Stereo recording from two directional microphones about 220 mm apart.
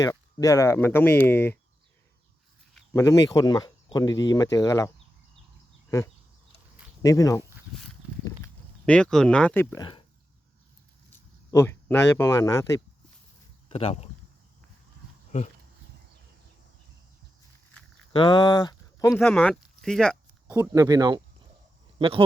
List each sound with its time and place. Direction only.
0.0 s speech: 15° left (ahead or behind)
2.9 s speech: 15° left (ahead or behind)
7.0 s speech: 15° left (ahead or behind)
8.9 s speech: 5° left (ahead or behind)
11.1 s speech: 10° left (ahead or behind)
13.7 s speech: 25° left (ahead or behind)
15.3 s speech: 35° left (ahead or behind)
18.1 s speech: 20° left (ahead or behind)
19.2 s speech: 5° left (ahead or behind)
20.5 s speech: 15° right (ahead or behind)